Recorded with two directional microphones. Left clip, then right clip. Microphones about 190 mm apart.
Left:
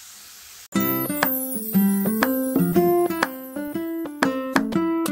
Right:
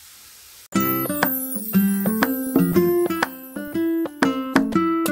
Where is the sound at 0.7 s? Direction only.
Centre (ahead or behind).